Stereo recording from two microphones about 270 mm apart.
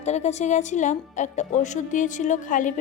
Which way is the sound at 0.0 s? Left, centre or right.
Left.